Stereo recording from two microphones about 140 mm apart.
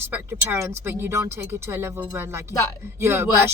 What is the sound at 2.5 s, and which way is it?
Speech, 25° left (ahead or behind).